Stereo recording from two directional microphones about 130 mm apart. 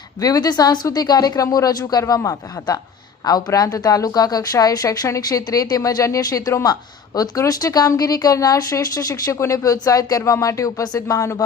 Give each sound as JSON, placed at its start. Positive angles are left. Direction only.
{"t": 0.2, "sound": "speech", "side_deg": 30}